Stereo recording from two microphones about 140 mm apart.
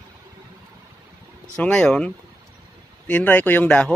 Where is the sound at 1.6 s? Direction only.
10° left (ahead or behind).